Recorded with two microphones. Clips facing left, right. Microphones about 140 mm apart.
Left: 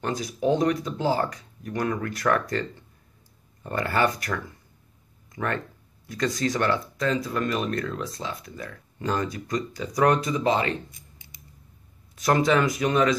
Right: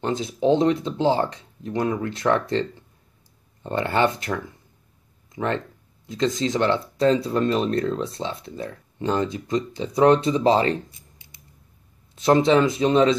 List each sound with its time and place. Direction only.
0.0 s speech: 25° right (ahead or behind)
3.6 s speech: 25° right (ahead or behind)
12.2 s speech: 25° right (ahead or behind)